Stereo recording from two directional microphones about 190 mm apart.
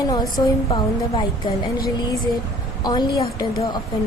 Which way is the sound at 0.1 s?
20° left (ahead or behind).